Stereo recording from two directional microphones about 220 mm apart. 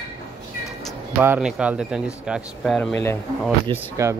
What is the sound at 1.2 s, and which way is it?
Speech, 5° right (ahead or behind).